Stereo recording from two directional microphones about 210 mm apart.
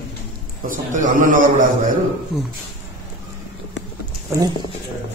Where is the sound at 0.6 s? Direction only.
40° right (ahead or behind).